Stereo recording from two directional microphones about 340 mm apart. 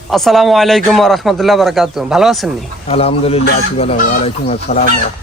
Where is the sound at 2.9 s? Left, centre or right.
Centre.